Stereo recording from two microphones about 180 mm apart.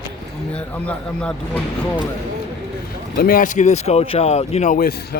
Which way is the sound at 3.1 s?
55° left (ahead or behind).